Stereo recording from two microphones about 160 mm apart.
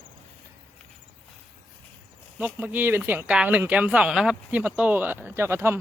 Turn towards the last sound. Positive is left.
turn(degrees=-15)  # may be behind; listen again after turning